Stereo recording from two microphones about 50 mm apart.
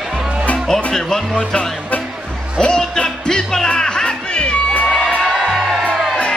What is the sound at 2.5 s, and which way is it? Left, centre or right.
Music, centre.